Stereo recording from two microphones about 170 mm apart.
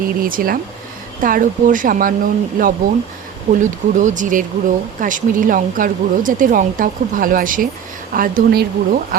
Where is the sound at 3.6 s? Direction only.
45° right (ahead or behind).